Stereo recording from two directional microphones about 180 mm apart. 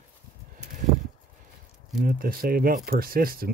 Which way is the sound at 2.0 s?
55° right (ahead or behind).